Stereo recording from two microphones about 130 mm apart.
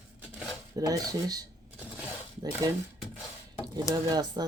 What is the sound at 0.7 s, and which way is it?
Speech, 30° right (ahead or behind).